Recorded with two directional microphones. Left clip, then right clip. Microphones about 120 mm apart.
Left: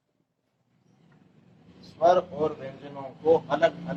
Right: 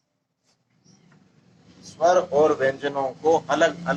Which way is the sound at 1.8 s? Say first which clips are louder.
Right 2 dB; 20° right (ahead or behind).